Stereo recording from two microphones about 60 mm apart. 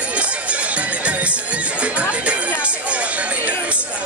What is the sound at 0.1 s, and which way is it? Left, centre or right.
Music, right.